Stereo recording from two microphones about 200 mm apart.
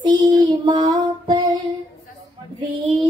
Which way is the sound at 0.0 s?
20° right (ahead or behind).